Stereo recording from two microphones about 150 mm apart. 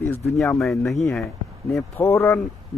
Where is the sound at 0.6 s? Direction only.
Centre (ahead or behind).